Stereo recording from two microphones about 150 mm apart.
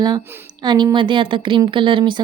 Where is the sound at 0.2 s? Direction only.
15° right (ahead or behind).